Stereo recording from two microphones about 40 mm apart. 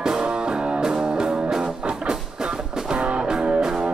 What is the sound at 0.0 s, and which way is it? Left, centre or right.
Music, right.